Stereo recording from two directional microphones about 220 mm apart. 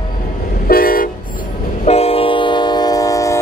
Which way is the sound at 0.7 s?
40° left (ahead or behind).